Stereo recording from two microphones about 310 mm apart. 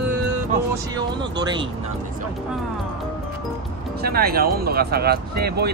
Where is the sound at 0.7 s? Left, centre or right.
Centre.